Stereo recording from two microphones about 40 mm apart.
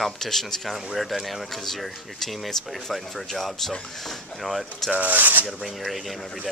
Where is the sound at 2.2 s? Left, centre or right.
Centre.